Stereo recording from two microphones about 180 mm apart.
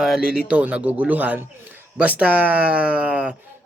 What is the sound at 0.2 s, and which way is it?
Speech, 55° left (ahead or behind).